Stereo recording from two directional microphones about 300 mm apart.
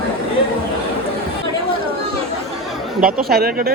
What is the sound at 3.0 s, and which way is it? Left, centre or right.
Speech, right.